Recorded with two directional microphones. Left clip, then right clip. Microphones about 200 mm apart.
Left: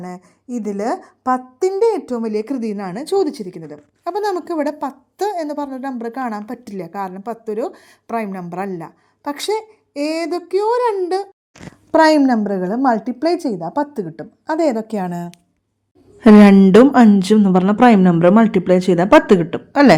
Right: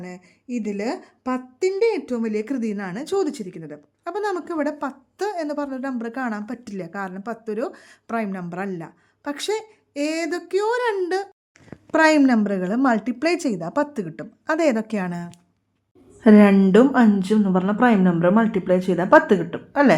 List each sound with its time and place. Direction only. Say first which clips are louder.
0.7 s speech: left 7 dB; 5° right (ahead or behind)
1.5 s a woman's voice: left 2 dB; 10° left (ahead or behind)
11.9 s a woman's voice: left 5 dB; 10° left (ahead or behind)
12.2 s a woman's voice: left 3 dB; centre (ahead or behind)
16.2 s a woman's voice: left 5 dB; 40° left (ahead or behind)